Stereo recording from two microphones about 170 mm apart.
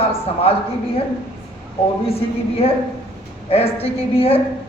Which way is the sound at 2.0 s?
35° left (ahead or behind).